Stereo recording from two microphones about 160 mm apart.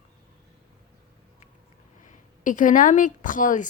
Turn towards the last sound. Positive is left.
turn(degrees=55)  # may be behind; listen again after turning